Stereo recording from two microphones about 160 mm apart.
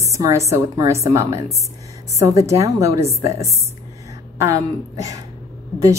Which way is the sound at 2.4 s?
20° right (ahead or behind).